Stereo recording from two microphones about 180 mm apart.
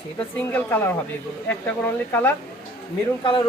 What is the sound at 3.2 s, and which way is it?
Speech, 25° left (ahead or behind).